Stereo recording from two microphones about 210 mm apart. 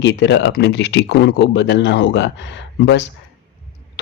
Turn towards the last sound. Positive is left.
turn(degrees=55)  # may be behind; listen again after turning